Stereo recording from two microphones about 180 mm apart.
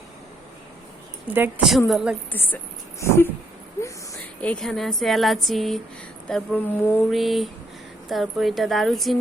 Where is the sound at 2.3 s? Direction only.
10° left (ahead or behind).